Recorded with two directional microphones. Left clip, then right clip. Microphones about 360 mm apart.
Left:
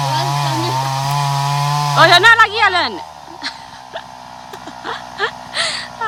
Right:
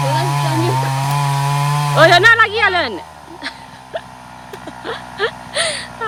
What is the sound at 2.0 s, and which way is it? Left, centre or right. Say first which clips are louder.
Speech: left 1 dB; centre.